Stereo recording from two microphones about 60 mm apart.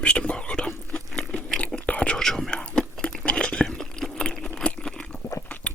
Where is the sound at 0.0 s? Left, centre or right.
Centre.